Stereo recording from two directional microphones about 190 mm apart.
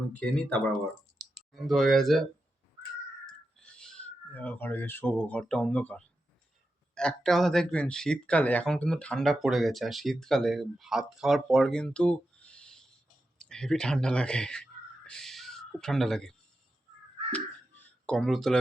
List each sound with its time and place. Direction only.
0.1 s speech: 5° left (ahead or behind)
3.6 s speech: 5° left (ahead or behind)
17.3 s a sound: 5° left (ahead or behind)